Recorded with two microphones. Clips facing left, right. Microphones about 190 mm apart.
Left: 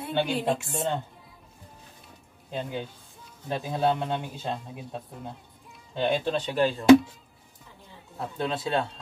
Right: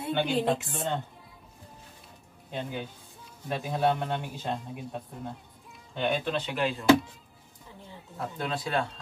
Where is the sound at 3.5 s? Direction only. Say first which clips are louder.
Left 1 dB; 25° left (ahead or behind).